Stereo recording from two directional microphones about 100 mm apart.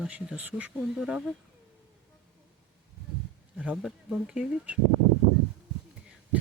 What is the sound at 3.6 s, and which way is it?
Speech, 10° right (ahead or behind).